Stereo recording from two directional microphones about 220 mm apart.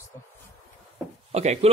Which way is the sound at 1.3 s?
30° right (ahead or behind).